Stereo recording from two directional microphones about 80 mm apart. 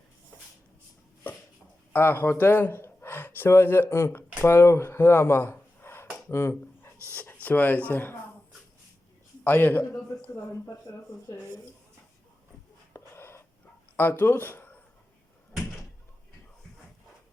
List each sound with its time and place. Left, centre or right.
1.9 s speech: left
6.2 s a sound: left
7.4 s speech: left
9.4 s speech: left
10.8 s speech: left
12.9 s a sound: left
13.9 s speech: left